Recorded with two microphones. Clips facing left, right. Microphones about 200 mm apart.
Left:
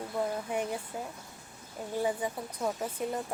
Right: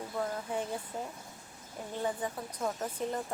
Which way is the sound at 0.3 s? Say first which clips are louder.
Left 3 dB; 15° left (ahead or behind).